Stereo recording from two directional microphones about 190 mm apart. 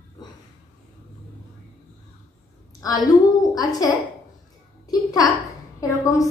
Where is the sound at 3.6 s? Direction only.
20° left (ahead or behind).